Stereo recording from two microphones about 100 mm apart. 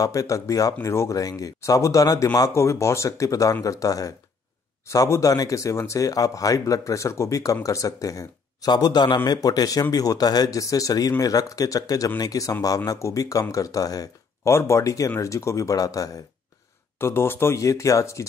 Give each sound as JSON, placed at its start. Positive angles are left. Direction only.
{"t": 0.0, "sound": "a man's voice", "side_deg": 35}
{"t": 17.0, "sound": "speech", "side_deg": 25}